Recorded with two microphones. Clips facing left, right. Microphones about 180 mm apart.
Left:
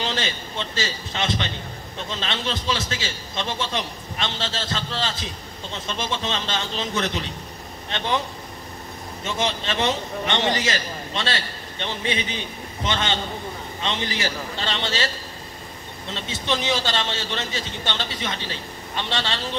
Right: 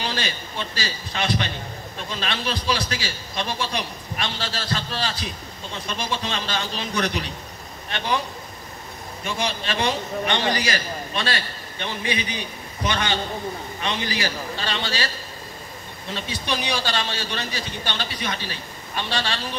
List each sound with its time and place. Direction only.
0.0 s a man's voice: 25° left (ahead or behind)
9.2 s a man's voice: 20° left (ahead or behind)
16.1 s a man's voice: 20° left (ahead or behind)